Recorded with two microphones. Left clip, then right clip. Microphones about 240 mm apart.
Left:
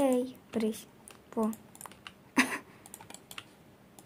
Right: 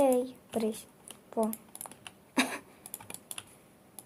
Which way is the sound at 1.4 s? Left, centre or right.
Left.